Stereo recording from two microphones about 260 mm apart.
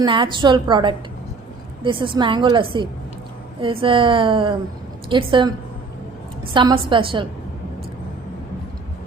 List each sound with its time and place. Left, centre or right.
0.0 s a woman's voice: centre